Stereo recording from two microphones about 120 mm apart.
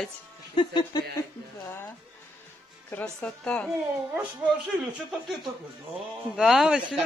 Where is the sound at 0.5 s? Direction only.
40° left (ahead or behind).